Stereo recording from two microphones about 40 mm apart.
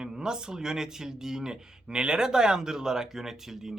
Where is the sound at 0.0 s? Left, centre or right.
Centre.